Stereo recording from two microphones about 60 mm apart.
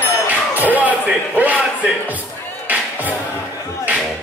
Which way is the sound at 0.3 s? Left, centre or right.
Right.